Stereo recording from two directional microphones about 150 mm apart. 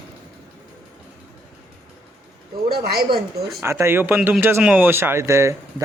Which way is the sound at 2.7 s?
90° right.